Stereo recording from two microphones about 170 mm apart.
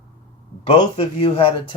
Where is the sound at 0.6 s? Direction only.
35° left (ahead or behind).